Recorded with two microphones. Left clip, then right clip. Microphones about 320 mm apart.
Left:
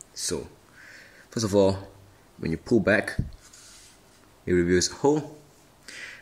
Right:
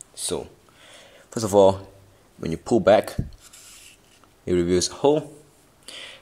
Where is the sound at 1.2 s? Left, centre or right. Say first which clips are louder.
Right 6 dB; centre.